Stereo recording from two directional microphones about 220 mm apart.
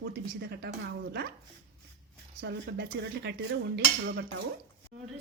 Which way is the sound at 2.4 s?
50° right (ahead or behind).